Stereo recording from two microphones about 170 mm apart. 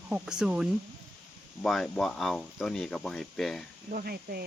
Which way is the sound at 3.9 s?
60° right (ahead or behind).